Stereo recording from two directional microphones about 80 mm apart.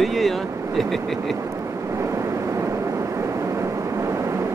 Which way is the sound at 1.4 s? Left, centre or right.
Right.